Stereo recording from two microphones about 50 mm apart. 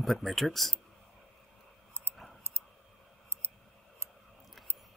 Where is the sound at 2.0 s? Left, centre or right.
Right.